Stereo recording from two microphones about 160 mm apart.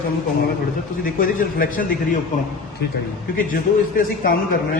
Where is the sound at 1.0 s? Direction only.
60° left (ahead or behind).